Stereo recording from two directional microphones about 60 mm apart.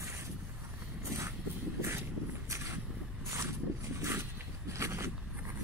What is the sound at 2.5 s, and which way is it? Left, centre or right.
Vehicle, right.